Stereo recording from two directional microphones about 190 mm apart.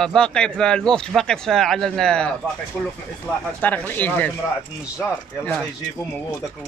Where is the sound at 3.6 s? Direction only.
10° left (ahead or behind).